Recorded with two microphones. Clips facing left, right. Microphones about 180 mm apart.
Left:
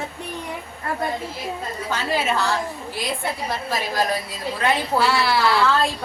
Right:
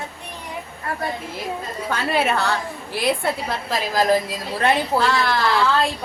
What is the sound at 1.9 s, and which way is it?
Speech, 60° right (ahead or behind).